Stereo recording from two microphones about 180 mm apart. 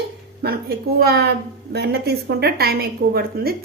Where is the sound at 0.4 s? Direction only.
60° right (ahead or behind).